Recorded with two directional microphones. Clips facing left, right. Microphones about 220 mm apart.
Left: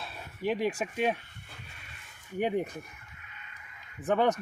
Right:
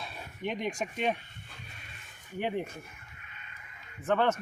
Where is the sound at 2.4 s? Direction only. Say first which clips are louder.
Left 4 dB; 15° left (ahead or behind).